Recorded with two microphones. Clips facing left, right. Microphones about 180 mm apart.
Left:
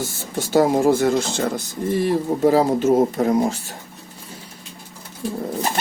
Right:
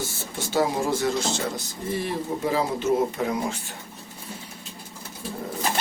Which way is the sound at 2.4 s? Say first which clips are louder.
Left 9 dB; 45° left (ahead or behind).